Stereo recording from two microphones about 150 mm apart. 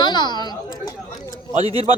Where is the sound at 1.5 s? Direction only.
40° right (ahead or behind).